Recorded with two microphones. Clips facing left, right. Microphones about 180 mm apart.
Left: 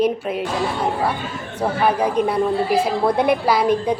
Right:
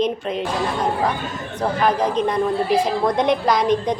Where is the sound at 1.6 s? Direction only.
10° left (ahead or behind).